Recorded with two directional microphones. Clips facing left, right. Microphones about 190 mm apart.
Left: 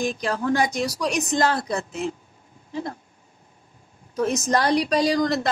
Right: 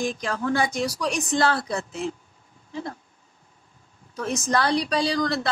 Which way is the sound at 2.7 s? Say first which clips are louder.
Left 3 dB; 40° left (ahead or behind).